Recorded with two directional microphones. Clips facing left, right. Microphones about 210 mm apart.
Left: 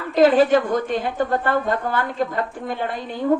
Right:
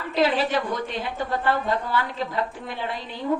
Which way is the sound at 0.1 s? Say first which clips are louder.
Left 8 dB; 50° left (ahead or behind).